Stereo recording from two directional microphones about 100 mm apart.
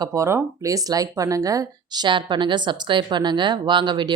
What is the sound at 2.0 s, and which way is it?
Speech, 50° right (ahead or behind).